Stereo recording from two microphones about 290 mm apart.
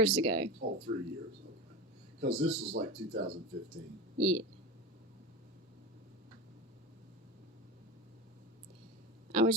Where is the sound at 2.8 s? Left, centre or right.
Right.